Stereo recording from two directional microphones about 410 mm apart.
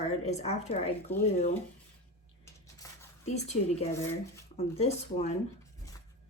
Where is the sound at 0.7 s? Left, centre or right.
Centre.